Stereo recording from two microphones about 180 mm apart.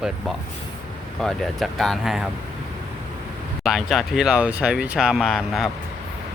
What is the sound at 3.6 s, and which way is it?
Speech, centre (ahead or behind).